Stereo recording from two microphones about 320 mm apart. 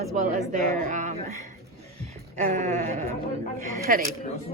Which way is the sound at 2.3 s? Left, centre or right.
Right.